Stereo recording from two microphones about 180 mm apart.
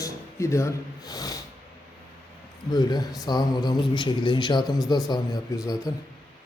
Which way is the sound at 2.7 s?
20° left (ahead or behind).